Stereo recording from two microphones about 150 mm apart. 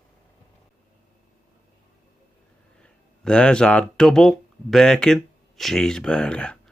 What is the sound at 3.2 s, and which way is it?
Speech, 5° left (ahead or behind).